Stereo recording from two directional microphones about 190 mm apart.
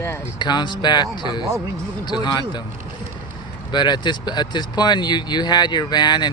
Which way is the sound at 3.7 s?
25° left (ahead or behind).